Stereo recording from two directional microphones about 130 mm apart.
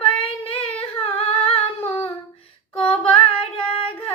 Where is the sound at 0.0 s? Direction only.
45° left (ahead or behind).